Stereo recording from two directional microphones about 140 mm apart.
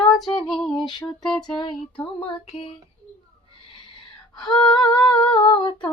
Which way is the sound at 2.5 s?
40° left (ahead or behind).